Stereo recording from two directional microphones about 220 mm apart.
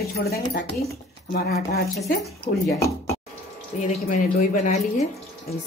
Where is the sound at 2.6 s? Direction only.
15° left (ahead or behind).